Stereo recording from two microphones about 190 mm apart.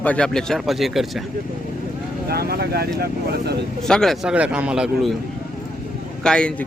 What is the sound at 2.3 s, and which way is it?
Speech, 55° right (ahead or behind).